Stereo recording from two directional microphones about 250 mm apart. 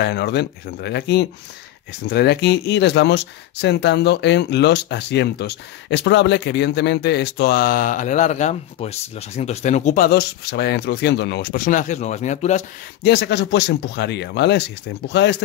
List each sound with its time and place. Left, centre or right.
0.0 s speech: left
13.0 s speech: left